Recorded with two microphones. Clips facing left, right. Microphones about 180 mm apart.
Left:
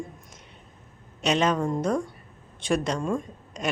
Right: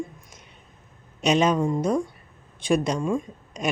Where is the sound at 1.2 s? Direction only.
10° right (ahead or behind).